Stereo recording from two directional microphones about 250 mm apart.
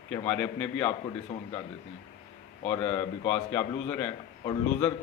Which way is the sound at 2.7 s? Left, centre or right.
Centre.